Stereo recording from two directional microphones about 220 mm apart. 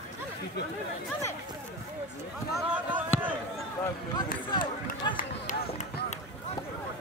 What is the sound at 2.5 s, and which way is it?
Speech, 5° right (ahead or behind).